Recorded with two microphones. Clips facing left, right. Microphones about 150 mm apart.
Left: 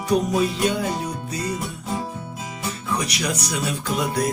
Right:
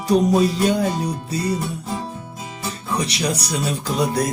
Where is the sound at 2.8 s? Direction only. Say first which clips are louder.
Right 3 dB; 30° right (ahead or behind).